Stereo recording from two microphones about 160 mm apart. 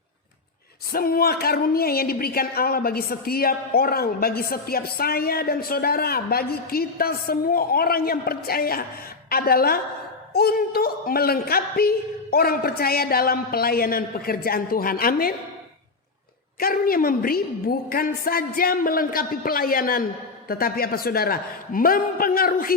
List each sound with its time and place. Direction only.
0.9 s a woman's voice: 65° left (ahead or behind)
16.6 s a woman's voice: 65° left (ahead or behind)